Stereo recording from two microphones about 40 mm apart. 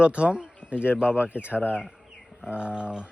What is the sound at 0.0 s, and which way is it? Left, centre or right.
A man's voice, right.